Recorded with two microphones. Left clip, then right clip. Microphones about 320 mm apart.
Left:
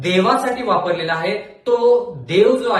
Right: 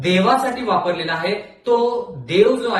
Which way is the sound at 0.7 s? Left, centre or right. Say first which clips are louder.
Left 1 dB; centre.